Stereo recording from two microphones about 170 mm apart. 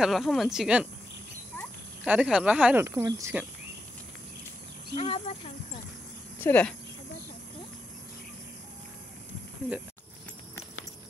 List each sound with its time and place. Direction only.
0.0 s speech: centre (ahead or behind)
2.0 s speech: 5° right (ahead or behind)
4.9 s speech: 35° left (ahead or behind)
6.4 s speech: 10° left (ahead or behind)